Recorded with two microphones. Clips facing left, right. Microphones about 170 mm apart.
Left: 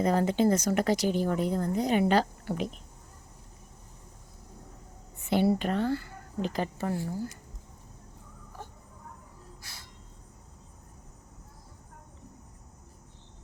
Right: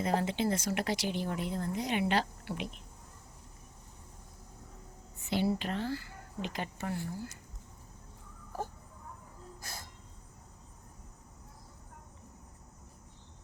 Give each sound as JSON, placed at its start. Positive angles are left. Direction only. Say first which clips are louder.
{"t": 0.0, "sound": "speech", "louder": "left 6 dB", "side_deg": 45}
{"t": 5.2, "sound": "speech", "louder": "left 6 dB", "side_deg": 55}
{"t": 6.4, "sound": "speech", "louder": "left 7 dB", "side_deg": 40}
{"t": 8.5, "sound": "a sound", "louder": "right 7 dB", "side_deg": -40}